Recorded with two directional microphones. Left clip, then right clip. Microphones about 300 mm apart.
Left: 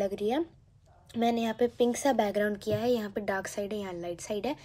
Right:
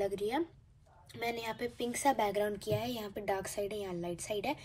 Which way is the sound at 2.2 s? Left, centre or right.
Centre.